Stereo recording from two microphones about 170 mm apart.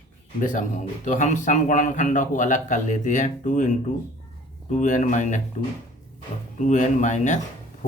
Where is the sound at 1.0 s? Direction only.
45° left (ahead or behind).